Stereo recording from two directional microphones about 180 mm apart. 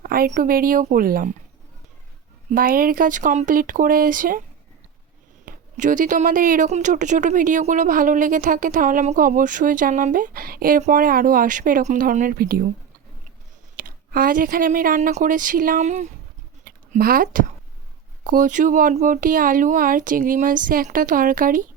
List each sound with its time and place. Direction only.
0.0 s speech: 55° right (ahead or behind)
2.5 s speech: 50° right (ahead or behind)
5.5 s speech: 45° right (ahead or behind)
13.7 s speech: 50° right (ahead or behind)